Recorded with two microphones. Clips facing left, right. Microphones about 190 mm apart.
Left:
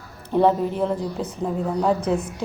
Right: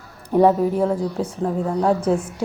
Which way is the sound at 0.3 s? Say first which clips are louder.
Right 3 dB; 10° right (ahead or behind).